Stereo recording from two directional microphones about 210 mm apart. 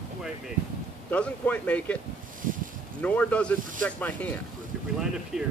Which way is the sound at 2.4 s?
40° right (ahead or behind).